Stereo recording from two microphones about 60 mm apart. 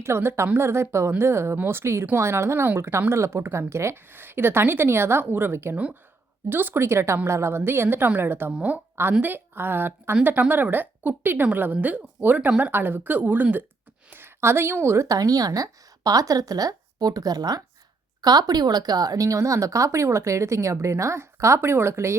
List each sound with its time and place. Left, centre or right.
0.0 s speech: right
4.1 s a woman's voice: right
5.7 s speech: right
6.5 s a woman's voice: right
6.8 s a woman's voice: right
8.5 s speech: right
9.2 s a woman's voice: right
14.8 s a woman's voice: right